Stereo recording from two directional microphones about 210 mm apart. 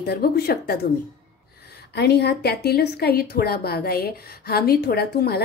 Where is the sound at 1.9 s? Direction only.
50° left (ahead or behind).